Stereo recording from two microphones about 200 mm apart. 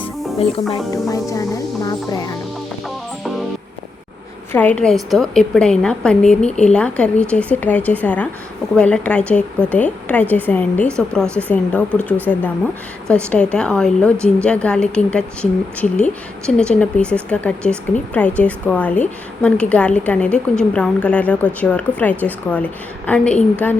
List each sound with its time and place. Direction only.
0.7 s a woman's voice: 15° left (ahead or behind)
4.5 s a woman's voice: 5° left (ahead or behind)